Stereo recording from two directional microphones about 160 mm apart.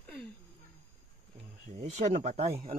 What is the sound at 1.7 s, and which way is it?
Speech, 45° right (ahead or behind).